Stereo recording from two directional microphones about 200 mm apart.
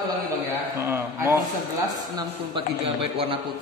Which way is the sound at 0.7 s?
15° right (ahead or behind).